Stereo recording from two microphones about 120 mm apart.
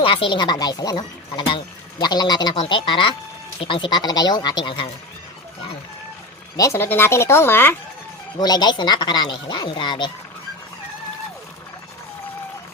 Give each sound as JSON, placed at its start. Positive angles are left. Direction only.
{"t": 0.0, "sound": "speech", "side_deg": 45}
{"t": 6.6, "sound": "speech", "side_deg": 20}
{"t": 8.4, "sound": "speech", "side_deg": 35}